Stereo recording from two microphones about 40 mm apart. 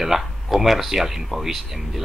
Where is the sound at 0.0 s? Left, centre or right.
Centre.